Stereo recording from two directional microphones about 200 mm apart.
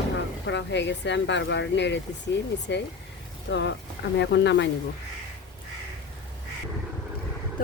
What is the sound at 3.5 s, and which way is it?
Speech, 65° left (ahead or behind).